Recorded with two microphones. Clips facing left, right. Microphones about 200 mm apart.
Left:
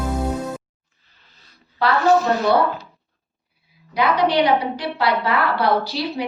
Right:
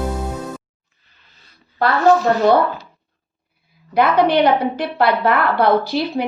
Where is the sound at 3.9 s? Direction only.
55° right (ahead or behind).